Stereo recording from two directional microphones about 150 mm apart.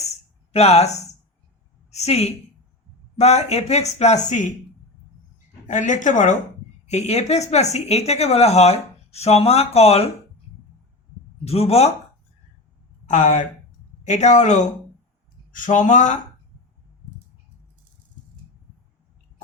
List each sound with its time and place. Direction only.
0.5 s a woman's voice: 45° left (ahead or behind)
5.6 s speech: 55° left (ahead or behind)
11.4 s speech: 45° left (ahead or behind)
13.1 s speech: 55° left (ahead or behind)